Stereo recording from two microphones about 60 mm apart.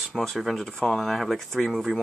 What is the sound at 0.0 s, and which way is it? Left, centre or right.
Speech, centre.